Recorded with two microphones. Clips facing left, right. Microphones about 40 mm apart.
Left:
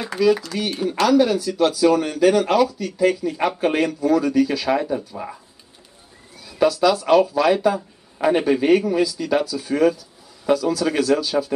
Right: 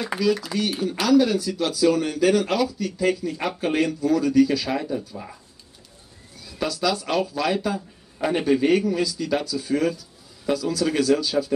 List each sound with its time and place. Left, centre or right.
0.2 s speech: centre
6.4 s speech: centre